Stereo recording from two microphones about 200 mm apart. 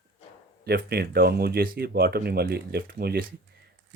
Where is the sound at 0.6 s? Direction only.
50° right (ahead or behind).